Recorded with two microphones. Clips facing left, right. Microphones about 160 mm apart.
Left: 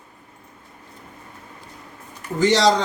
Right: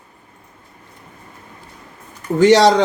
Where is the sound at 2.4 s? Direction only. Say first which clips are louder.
Right 7 dB; 65° right (ahead or behind).